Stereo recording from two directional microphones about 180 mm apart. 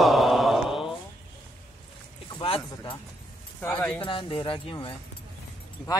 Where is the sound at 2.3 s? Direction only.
30° left (ahead or behind).